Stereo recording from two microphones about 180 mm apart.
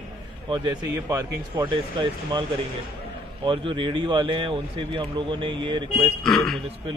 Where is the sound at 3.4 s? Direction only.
25° right (ahead or behind).